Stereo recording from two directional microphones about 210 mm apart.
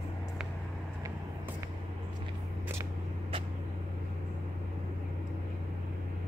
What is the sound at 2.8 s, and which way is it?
Vehicle, 25° right (ahead or behind).